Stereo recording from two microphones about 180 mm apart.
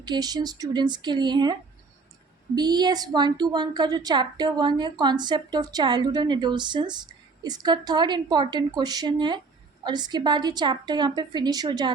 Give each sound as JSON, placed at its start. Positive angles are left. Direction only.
{"t": 0.0, "sound": "a woman's voice", "side_deg": -25}
{"t": 2.6, "sound": "a woman's voice", "side_deg": -25}